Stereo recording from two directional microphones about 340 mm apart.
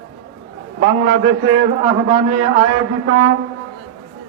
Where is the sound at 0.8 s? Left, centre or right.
Right.